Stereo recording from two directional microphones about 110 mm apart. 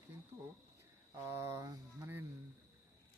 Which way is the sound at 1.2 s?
25° right (ahead or behind).